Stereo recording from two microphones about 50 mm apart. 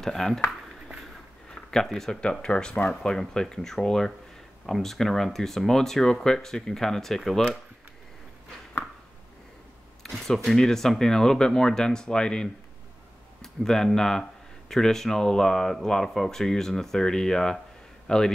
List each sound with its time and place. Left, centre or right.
0.0 s speech: centre
1.5 s a sound: centre
1.9 s speech: centre
2.4 s speech: centre
10.0 s a man's voice: centre